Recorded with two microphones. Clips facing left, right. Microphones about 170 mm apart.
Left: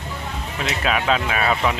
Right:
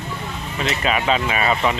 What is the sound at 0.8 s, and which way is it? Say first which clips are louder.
Speech: even; centre (ahead or behind).